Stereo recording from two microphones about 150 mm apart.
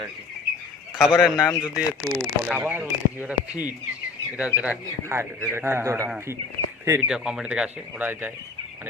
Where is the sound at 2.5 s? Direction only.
15° right (ahead or behind).